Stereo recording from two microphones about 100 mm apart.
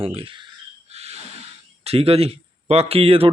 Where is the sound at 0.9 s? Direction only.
90° right.